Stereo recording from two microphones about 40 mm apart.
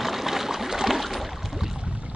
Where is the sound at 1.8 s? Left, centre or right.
Right.